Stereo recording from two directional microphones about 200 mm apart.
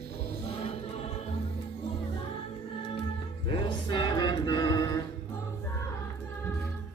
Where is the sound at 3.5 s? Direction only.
25° left (ahead or behind).